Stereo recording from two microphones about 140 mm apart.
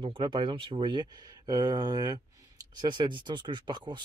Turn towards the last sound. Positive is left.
turn(degrees=-35)  # may be behind; listen again after turning